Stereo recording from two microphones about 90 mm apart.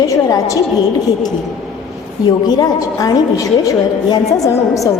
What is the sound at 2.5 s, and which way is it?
A woman's voice, 45° left (ahead or behind).